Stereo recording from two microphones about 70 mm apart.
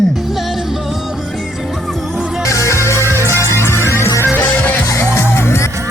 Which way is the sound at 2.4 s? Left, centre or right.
Left.